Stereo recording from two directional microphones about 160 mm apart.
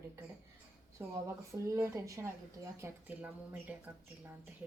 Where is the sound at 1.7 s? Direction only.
15° right (ahead or behind).